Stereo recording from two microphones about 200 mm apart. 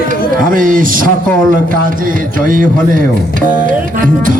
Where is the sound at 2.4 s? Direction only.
45° right (ahead or behind).